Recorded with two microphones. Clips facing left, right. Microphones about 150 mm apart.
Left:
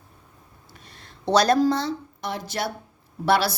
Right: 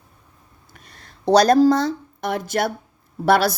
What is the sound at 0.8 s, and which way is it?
A woman's voice, 45° right (ahead or behind).